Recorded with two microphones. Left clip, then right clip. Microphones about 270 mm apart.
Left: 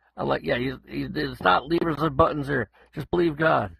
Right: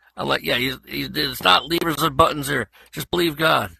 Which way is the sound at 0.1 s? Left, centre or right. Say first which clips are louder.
Right 4 dB; right.